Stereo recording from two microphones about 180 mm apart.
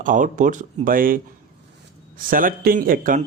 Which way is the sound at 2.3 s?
50° right (ahead or behind).